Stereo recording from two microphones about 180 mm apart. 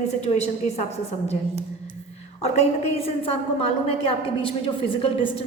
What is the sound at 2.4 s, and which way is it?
A woman's voice, 35° left (ahead or behind).